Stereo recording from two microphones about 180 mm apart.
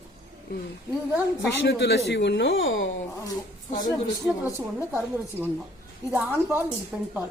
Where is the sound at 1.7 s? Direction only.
70° left (ahead or behind); by 2.8 s 90° left.